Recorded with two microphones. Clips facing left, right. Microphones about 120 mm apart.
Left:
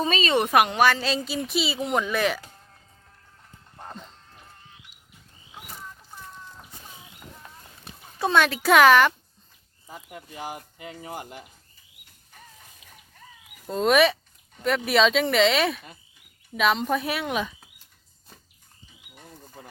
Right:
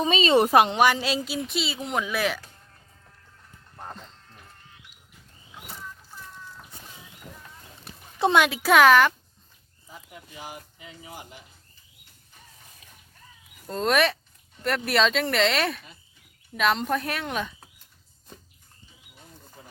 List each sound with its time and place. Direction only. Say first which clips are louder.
0.0 s speech: right 3 dB; 20° right (ahead or behind); by 2.4 s centre (ahead or behind)
8.2 s speech: right 1 dB; 15° right (ahead or behind)
8.7 s speech: left 1 dB; centre (ahead or behind)
10.2 s speech: left 5 dB; 45° left (ahead or behind)
13.7 s speech: left 3 dB; 5° left (ahead or behind)